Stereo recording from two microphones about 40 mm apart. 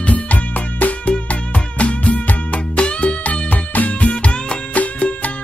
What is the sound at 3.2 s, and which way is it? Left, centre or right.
Music, left.